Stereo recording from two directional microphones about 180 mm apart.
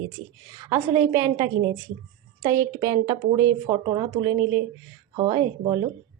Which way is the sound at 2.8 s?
20° right (ahead or behind).